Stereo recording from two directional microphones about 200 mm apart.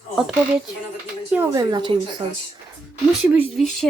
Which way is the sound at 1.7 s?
25° right (ahead or behind).